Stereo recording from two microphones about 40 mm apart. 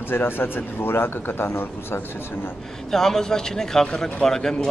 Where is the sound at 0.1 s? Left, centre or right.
Left.